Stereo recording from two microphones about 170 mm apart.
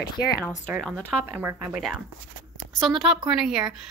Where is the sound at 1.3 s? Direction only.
10° right (ahead or behind).